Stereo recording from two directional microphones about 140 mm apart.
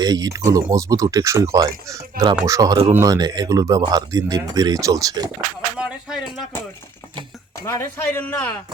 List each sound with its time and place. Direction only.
0.0 s speech: 25° right (ahead or behind)
5.8 s a sound: 5° right (ahead or behind)
7.6 s speech: 20° left (ahead or behind)